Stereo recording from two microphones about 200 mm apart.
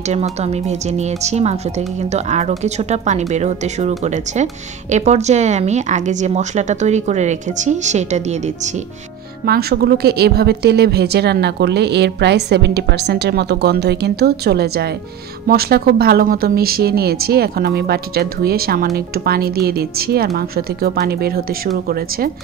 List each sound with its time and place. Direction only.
0.1 s a woman's voice: 30° right (ahead or behind)
9.5 s speech: 50° right (ahead or behind)